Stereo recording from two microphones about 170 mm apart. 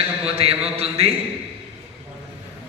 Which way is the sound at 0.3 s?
35° right (ahead or behind).